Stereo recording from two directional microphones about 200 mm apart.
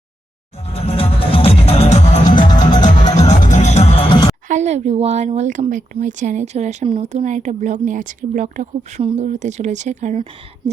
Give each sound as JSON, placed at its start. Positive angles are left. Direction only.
{"t": 0.7, "sound": "music", "side_deg": 30}
{"t": 2.3, "sound": "music", "side_deg": 25}
{"t": 3.2, "sound": "music", "side_deg": 35}
{"t": 4.4, "sound": "speech", "side_deg": -35}